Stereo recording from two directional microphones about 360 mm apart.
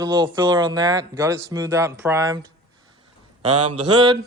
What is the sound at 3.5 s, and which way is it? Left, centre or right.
Mantra, right.